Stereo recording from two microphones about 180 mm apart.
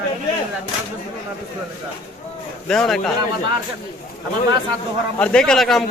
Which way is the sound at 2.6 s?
5° left (ahead or behind).